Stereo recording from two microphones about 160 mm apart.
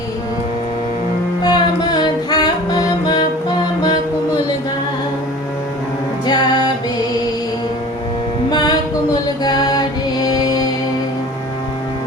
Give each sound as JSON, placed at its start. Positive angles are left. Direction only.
{"t": 1.4, "sound": "music", "side_deg": 25}
{"t": 6.2, "sound": "music", "side_deg": 25}
{"t": 8.4, "sound": "music", "side_deg": 25}